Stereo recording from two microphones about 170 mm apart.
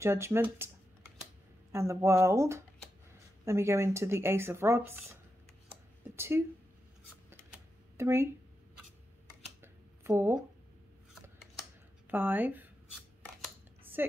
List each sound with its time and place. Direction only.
0.0 s speech: 15° right (ahead or behind)
1.7 s speech: 15° right (ahead or behind)
7.2 s typing: 15° right (ahead or behind)
9.6 s a sound: 15° right (ahead or behind)
12.1 s speech: 10° right (ahead or behind)
14.0 s a woman's voice: 10° right (ahead or behind)